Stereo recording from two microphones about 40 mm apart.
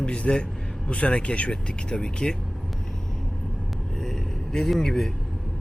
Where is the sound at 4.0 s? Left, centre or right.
Centre.